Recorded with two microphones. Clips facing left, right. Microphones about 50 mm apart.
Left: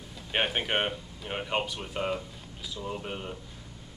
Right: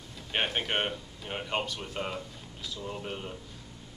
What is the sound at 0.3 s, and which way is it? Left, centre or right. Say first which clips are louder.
Speech: left 2 dB; centre.